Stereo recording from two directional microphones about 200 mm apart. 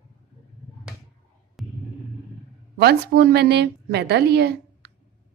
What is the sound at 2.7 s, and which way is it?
A woman's voice, 55° right (ahead or behind).